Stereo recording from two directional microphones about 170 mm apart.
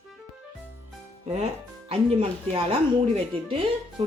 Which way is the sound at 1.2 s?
40° right (ahead or behind).